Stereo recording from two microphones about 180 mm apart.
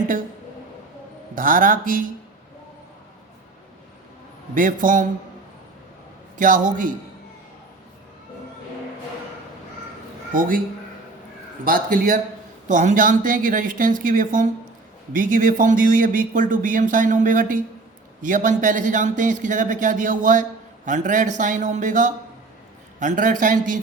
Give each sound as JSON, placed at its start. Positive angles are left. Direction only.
{"t": 1.4, "sound": "a man's voice", "side_deg": -50}
{"t": 4.5, "sound": "a man's voice", "side_deg": -50}
{"t": 6.3, "sound": "a man's voice", "side_deg": -45}
{"t": 10.3, "sound": "a man's voice", "side_deg": -50}
{"t": 11.6, "sound": "a man's voice", "side_deg": -50}